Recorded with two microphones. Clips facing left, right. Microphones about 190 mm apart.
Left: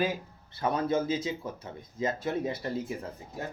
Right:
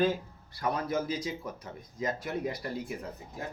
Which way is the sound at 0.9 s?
25° left (ahead or behind).